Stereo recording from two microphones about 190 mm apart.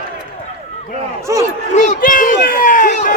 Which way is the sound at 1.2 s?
15° right (ahead or behind).